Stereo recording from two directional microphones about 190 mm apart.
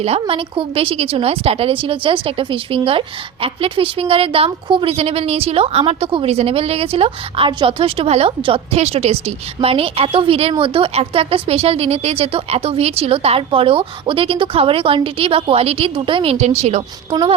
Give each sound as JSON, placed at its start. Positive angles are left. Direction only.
{"t": 0.0, "sound": "a woman's voice", "side_deg": -30}